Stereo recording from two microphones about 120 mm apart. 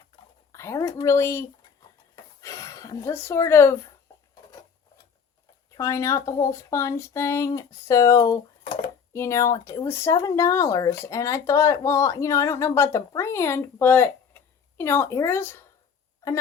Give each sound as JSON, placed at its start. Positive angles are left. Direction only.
{"t": 0.5, "sound": "a woman's voice", "side_deg": 25}
{"t": 2.1, "sound": "a sound", "side_deg": 25}
{"t": 5.7, "sound": "speech", "side_deg": 25}